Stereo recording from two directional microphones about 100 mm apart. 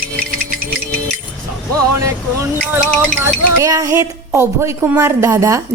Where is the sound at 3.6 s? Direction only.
35° right (ahead or behind).